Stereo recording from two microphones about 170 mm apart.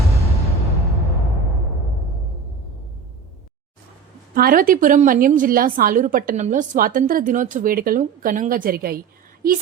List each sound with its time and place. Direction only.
4.4 s a woman's voice: 60° right (ahead or behind)